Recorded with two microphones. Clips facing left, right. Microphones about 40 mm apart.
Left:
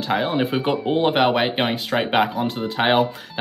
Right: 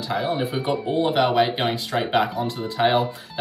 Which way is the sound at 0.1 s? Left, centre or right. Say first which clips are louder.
Left 3 dB; left.